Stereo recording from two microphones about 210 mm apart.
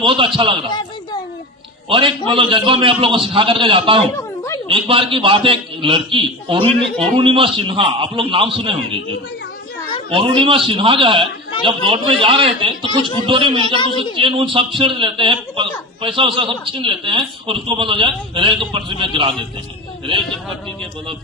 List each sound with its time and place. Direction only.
0.0 s a man's voice: 25° right (ahead or behind)
0.7 s a sound: 20° left (ahead or behind)
1.9 s a man's voice: 25° right (ahead or behind)
4.2 s a sound: 15° left (ahead or behind)
4.7 s a man's voice: 25° right (ahead or behind)
6.7 s a man's voice: 5° left (ahead or behind)
7.2 s a man's voice: 25° right (ahead or behind)
13.7 s a woman's voice: 20° left (ahead or behind)
14.0 s a man's voice: 25° right (ahead or behind)